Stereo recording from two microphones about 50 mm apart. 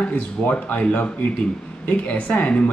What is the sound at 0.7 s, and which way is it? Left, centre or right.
Speech, left.